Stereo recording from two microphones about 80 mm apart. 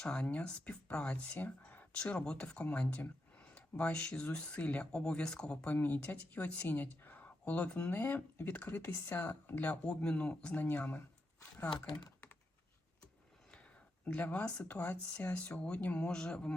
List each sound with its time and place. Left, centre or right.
0.0 s speech: centre
5.7 s speech: left
11.7 s speech: left
14.0 s speech: centre